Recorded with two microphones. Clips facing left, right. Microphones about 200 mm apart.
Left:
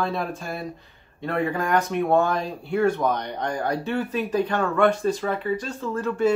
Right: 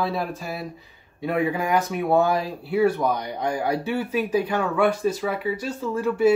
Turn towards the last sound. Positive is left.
turn(degrees=-10)  # may be behind; listen again after turning